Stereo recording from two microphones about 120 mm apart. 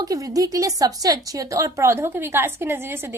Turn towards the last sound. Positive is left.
turn(degrees=-20)  # may be behind; listen again after turning